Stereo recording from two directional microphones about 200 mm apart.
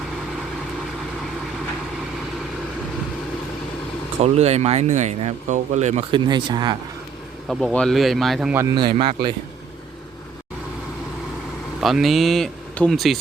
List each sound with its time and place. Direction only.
4.2 s speech: 30° right (ahead or behind)
7.4 s speech: centre (ahead or behind)
8.6 s a man's voice: 25° right (ahead or behind)
11.8 s speech: centre (ahead or behind)